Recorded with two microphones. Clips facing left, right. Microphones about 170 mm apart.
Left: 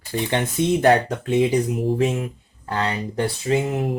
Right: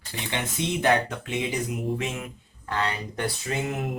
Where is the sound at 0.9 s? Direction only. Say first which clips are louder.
Left 6 dB; 35° left (ahead or behind).